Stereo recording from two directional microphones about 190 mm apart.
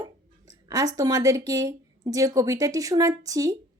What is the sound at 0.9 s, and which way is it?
A child's voice, 20° right (ahead or behind).